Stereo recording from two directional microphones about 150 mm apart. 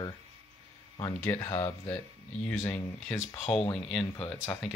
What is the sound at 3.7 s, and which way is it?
Speech, 5° left (ahead or behind).